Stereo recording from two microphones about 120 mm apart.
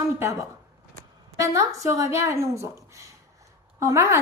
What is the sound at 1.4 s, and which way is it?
A woman's voice, 25° right (ahead or behind).